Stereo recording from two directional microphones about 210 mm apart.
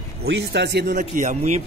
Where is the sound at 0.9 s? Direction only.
35° right (ahead or behind).